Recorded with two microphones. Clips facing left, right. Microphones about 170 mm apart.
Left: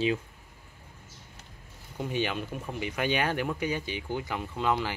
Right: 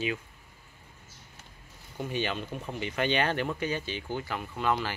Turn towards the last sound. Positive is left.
turn(degrees=15)  # may be behind; listen again after turning